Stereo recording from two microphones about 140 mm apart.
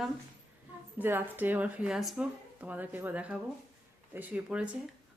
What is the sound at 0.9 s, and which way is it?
Speech, 15° right (ahead or behind).